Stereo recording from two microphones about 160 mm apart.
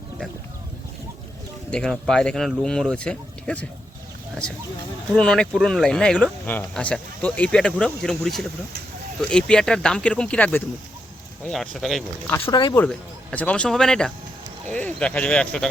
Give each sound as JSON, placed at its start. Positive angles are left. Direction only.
{"t": 1.7, "sound": "speech", "side_deg": 5}
{"t": 5.1, "sound": "speech", "side_deg": 5}
{"t": 12.5, "sound": "speech", "side_deg": 30}
{"t": 12.7, "sound": "speech", "side_deg": 10}